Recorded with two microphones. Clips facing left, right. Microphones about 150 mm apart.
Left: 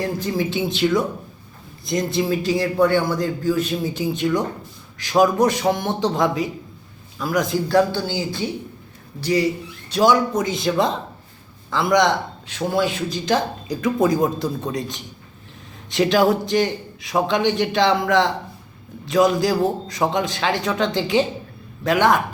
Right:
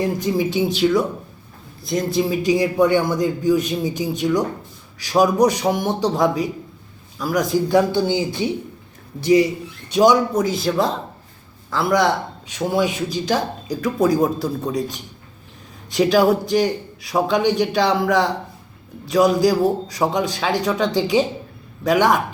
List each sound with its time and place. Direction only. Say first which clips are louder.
0.0 s a man's voice: right 3 dB; 10° right (ahead or behind)
6.1 s speech: right 1 dB; centre (ahead or behind)
7.7 s a man's voice: right 1 dB; 15° right (ahead or behind)
9.9 s a man's voice: right 2 dB; 15° right (ahead or behind)
10.4 s a man's voice: right 1 dB; centre (ahead or behind)
13.8 s a man's voice: right 1 dB; centre (ahead or behind)